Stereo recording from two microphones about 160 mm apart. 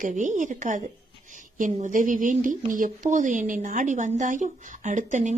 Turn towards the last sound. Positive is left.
turn(degrees=-50)  # may be behind; listen again after turning